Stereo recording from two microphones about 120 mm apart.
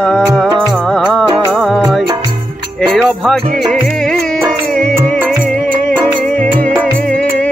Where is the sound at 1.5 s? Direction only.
5° right (ahead or behind).